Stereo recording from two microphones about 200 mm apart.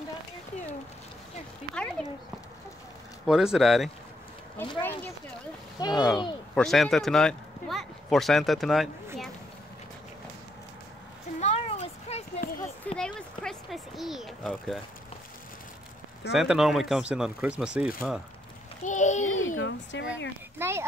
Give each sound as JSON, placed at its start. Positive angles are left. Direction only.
{"t": 2.0, "sound": "speech", "side_deg": 5}
{"t": 3.3, "sound": "speech", "side_deg": 0}
{"t": 5.8, "sound": "speech", "side_deg": 20}
{"t": 6.5, "sound": "a man's voice", "side_deg": 0}
{"t": 11.3, "sound": "a sound", "side_deg": 30}
{"t": 12.8, "sound": "a sound", "side_deg": 5}
{"t": 16.3, "sound": "speech", "side_deg": 0}
{"t": 18.9, "sound": "a sound", "side_deg": 40}
{"t": 19.2, "sound": "speech", "side_deg": 85}
{"t": 20.5, "sound": "speech", "side_deg": -10}